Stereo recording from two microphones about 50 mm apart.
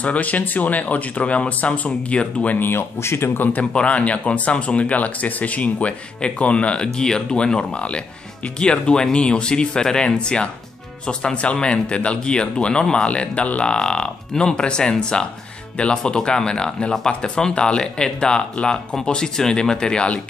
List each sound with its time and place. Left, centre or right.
0.0 s speech: left
2.6 s a man's voice: left
3.7 s speech: left